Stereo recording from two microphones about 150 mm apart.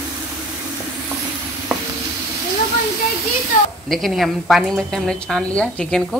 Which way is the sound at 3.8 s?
Centre (ahead or behind).